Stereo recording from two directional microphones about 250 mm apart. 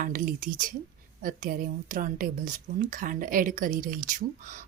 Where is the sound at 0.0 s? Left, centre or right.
Right.